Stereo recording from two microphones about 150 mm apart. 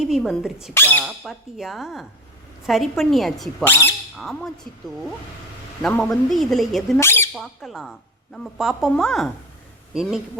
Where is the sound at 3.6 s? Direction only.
15° left (ahead or behind).